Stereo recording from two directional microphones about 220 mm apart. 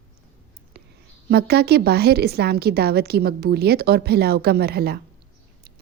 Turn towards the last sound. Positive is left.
turn(degrees=-45)  # may be behind; listen again after turning